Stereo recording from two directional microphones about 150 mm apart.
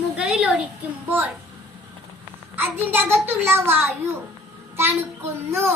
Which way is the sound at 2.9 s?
15° right (ahead or behind).